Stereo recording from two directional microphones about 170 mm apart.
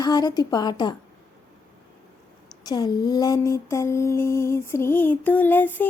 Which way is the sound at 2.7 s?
25° left (ahead or behind).